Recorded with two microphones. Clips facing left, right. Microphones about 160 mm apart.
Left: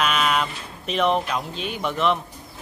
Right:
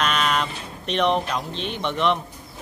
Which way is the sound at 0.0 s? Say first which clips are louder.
Left 1 dB; 5° left (ahead or behind).